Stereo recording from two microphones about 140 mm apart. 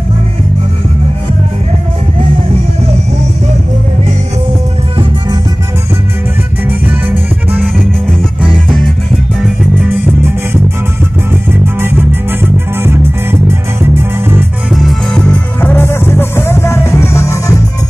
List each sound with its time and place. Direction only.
6.7 s music: 15° right (ahead or behind)
8.6 s music: centre (ahead or behind)
11.6 s music: 15° right (ahead or behind)
14.7 s music: centre (ahead or behind); by 17.6 s 20° left (ahead or behind)